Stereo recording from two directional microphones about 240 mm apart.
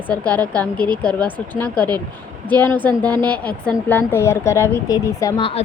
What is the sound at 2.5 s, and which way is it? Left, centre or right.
A woman's voice, centre.